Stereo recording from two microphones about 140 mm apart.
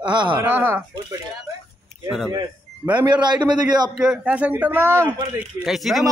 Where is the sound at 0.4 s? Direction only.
15° right (ahead or behind).